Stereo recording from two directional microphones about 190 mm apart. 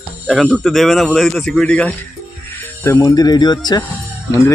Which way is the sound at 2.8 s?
20° left (ahead or behind).